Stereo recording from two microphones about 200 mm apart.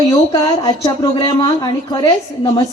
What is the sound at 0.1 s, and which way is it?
Speech, 20° left (ahead or behind).